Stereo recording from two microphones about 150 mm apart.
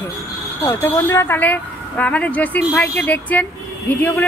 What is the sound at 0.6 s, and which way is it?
Speech, 15° left (ahead or behind).